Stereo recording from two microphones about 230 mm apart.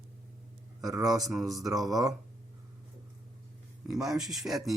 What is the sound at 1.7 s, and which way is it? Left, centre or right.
Speech, centre.